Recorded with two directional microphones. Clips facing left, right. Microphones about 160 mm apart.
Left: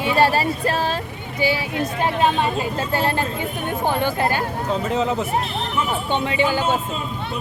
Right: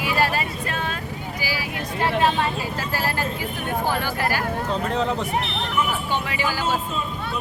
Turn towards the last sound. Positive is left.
turn(degrees=25)  # may be behind; listen again after turning